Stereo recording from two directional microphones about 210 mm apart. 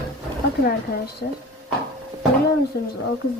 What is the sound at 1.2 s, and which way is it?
Speech, 50° left (ahead or behind).